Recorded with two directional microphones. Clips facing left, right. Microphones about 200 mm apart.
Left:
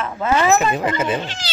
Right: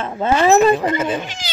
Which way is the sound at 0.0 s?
30° right (ahead or behind).